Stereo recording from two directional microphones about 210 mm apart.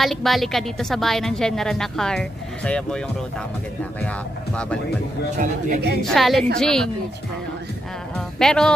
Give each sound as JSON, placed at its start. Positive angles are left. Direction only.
{"t": 0.0, "sound": "a woman's voice", "side_deg": 0}
{"t": 5.4, "sound": "a man's voice", "side_deg": -40}
{"t": 6.1, "sound": "a woman's voice", "side_deg": 0}
{"t": 8.4, "sound": "a woman's voice", "side_deg": 5}